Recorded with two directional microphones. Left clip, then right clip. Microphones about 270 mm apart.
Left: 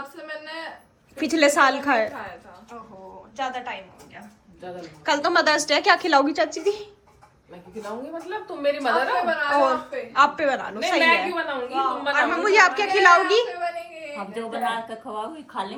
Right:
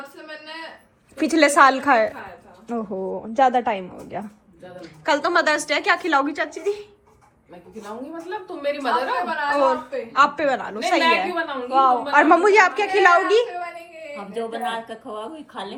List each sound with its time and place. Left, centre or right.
1.1 s a woman's voice: centre
3.3 s a woman's voice: right
4.8 s a woman's voice: centre
8.3 s a woman's voice: centre
11.7 s a woman's voice: centre
12.5 s a woman's voice: centre